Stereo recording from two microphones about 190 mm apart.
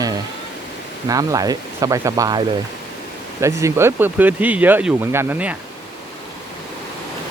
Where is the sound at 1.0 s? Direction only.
20° right (ahead or behind).